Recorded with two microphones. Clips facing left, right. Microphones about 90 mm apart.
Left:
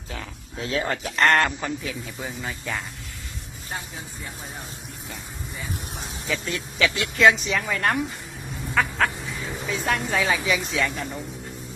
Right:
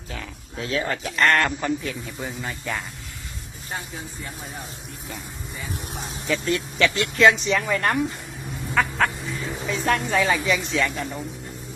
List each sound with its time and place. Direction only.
0.1 s speech: 25° left (ahead or behind)
1.5 s speech: centre (ahead or behind)
5.0 s vehicle: centre (ahead or behind)
6.2 s speech: centre (ahead or behind)